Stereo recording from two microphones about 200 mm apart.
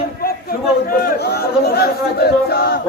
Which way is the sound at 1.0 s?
50° left (ahead or behind).